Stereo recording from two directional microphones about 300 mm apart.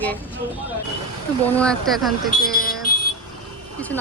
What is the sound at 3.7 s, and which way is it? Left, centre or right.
Speech, centre.